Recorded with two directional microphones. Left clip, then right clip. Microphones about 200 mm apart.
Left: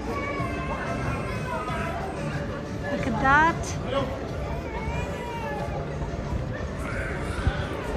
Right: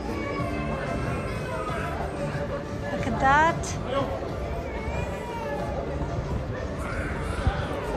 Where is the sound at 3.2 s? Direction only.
10° right (ahead or behind).